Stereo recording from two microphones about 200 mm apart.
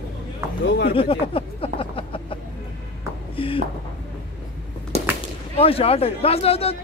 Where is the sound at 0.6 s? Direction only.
55° left (ahead or behind).